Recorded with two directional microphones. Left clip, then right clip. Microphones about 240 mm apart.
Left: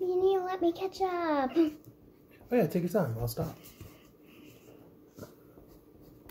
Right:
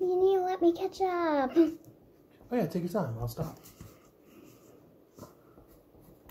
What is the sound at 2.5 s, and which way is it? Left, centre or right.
Speech, centre.